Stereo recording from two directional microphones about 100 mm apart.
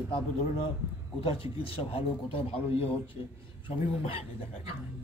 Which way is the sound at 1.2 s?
65° left (ahead or behind).